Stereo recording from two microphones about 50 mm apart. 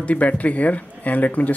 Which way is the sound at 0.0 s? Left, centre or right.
Left.